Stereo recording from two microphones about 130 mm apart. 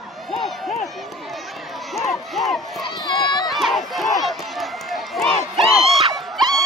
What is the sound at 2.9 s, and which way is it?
Run, 35° left (ahead or behind).